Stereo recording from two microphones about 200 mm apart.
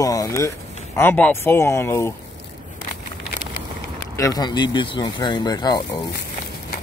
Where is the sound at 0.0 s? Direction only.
15° left (ahead or behind).